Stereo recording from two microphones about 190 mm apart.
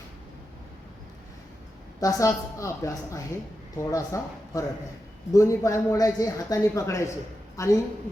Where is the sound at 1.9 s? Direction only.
15° left (ahead or behind).